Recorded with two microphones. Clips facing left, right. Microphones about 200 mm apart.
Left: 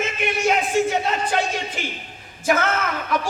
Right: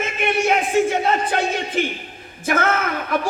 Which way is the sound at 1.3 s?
55° right (ahead or behind).